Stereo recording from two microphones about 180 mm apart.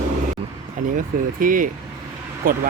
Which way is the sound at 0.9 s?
50° right (ahead or behind).